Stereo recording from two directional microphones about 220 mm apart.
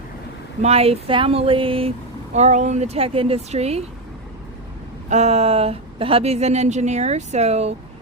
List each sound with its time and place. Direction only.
0.6 s a woman's voice: 25° right (ahead or behind)
5.0 s a woman's voice: 30° right (ahead or behind)